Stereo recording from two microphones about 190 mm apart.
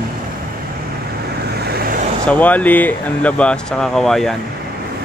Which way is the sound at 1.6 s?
55° right (ahead or behind).